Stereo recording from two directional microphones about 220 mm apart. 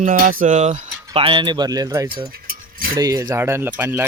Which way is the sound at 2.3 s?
40° right (ahead or behind).